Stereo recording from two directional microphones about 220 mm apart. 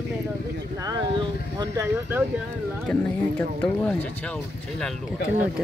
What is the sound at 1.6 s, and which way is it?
Speech, 10° right (ahead or behind).